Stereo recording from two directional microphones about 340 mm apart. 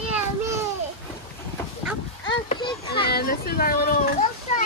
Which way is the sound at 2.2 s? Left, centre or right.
Centre.